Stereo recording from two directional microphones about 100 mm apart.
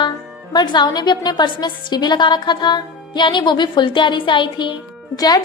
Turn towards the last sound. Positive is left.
turn(degrees=40)  # may be behind; listen again after turning